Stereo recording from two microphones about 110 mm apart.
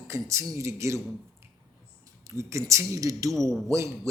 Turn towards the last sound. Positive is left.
turn(degrees=-25)  # may be behind; listen again after turning